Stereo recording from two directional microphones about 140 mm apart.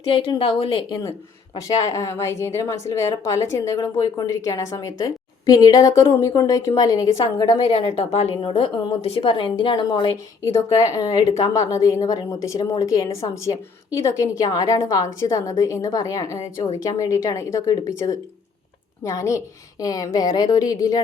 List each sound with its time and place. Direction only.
0.0 s a woman's voice: 40° left (ahead or behind)
1.6 s a woman's voice: 25° left (ahead or behind)
7.9 s a woman's voice: 50° left (ahead or behind)
8.4 s a woman's voice: 35° left (ahead or behind)
10.4 s a woman's voice: 20° left (ahead or behind)